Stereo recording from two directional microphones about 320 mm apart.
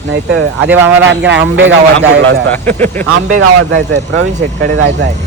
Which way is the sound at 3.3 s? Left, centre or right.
Right.